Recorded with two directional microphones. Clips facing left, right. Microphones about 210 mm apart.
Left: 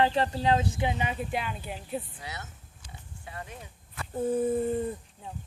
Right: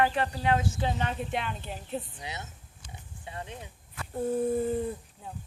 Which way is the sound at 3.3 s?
25° right (ahead or behind).